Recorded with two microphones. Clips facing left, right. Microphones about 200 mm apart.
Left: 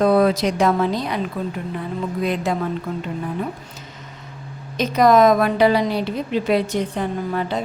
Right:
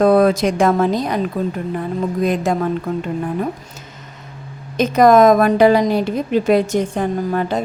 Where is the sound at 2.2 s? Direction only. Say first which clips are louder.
Right 4 dB; 45° right (ahead or behind).